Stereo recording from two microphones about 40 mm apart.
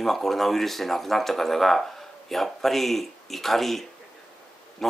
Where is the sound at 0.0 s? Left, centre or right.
Centre.